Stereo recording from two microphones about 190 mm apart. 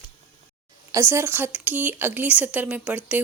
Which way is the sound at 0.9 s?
15° right (ahead or behind).